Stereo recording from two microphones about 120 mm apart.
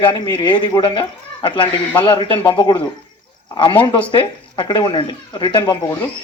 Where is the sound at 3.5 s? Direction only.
45° left (ahead or behind).